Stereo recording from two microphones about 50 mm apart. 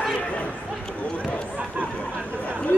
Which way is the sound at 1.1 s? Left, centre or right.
Left.